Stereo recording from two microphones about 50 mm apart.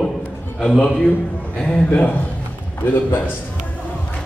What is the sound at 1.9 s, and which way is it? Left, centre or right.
A man's voice, left.